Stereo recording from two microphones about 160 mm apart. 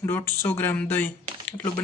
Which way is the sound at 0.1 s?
15° left (ahead or behind).